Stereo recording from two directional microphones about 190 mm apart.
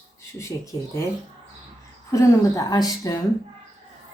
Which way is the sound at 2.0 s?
15° left (ahead or behind).